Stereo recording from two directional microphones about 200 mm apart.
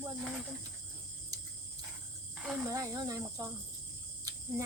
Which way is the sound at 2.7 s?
15° right (ahead or behind).